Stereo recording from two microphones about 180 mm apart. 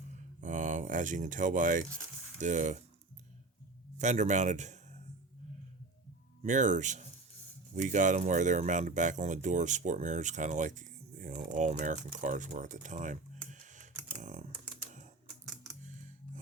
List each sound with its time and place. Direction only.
0.4 s speech: 45° right (ahead or behind)
3.9 s speech: 40° right (ahead or behind)
6.4 s speech: 45° right (ahead or behind)
14.2 s typing: 45° right (ahead or behind)
15.8 s music: 45° right (ahead or behind)